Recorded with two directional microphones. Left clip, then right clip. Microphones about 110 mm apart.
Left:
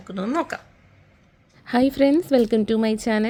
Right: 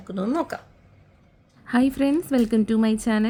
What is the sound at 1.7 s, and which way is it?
A woman's voice, 55° left (ahead or behind).